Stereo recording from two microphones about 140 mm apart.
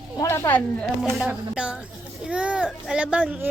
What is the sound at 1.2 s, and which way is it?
A woman's voice, 5° right (ahead or behind).